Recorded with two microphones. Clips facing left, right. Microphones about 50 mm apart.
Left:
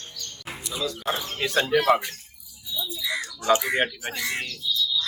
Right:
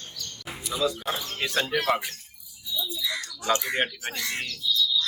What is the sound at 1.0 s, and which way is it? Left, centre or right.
Speech, centre.